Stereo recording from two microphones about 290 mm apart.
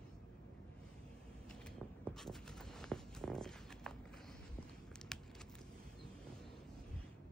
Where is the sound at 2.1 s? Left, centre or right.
Centre.